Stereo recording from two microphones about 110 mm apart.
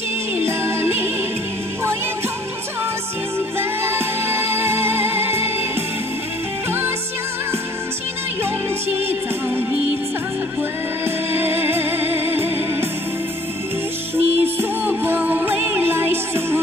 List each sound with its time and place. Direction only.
0.5 s music: 20° right (ahead or behind)
3.5 s music: 20° right (ahead or behind)
11.1 s music: 20° right (ahead or behind)
14.1 s music: 20° right (ahead or behind)